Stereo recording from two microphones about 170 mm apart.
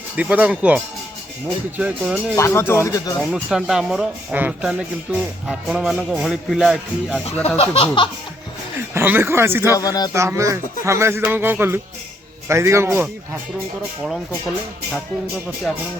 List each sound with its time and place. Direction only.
0.2 s music: 10° right (ahead or behind)
2.3 s speech: 15° left (ahead or behind)
3.3 s speech: 5° right (ahead or behind)
7.4 s speech: 35° left (ahead or behind)
8.9 s music: 10° right (ahead or behind)
9.7 s speech: 20° left (ahead or behind)
10.1 s music: 15° right (ahead or behind)